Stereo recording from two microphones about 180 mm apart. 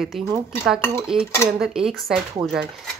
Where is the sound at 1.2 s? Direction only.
15° left (ahead or behind).